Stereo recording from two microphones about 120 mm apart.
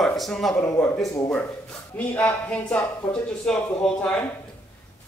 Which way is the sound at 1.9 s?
15° left (ahead or behind).